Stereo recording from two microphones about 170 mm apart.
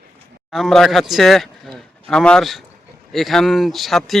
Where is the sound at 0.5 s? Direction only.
Centre (ahead or behind).